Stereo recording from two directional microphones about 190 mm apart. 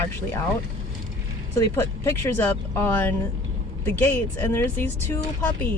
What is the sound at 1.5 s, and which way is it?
Speech, 15° left (ahead or behind).